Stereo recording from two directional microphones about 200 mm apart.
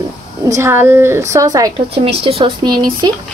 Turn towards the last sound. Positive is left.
turn(degrees=-20)  # may be behind; listen again after turning